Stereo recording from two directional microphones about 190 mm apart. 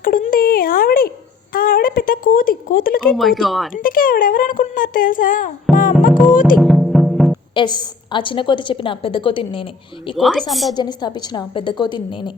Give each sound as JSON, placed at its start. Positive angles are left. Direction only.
{"t": 0.0, "sound": "a sound", "side_deg": 45}
{"t": 1.5, "sound": "speech", "side_deg": 50}
{"t": 3.2, "sound": "speech", "side_deg": 0}
{"t": 3.8, "sound": "speech", "side_deg": 45}
{"t": 5.7, "sound": "music", "side_deg": 0}
{"t": 7.5, "sound": "a woman's voice", "side_deg": 25}
{"t": 10.2, "sound": "speech", "side_deg": 0}
{"t": 10.8, "sound": "a woman's voice", "side_deg": 25}